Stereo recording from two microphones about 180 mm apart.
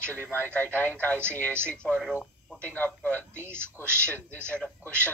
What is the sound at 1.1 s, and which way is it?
Speech, 15° right (ahead or behind).